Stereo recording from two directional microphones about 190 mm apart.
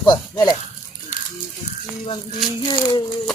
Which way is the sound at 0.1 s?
20° left (ahead or behind).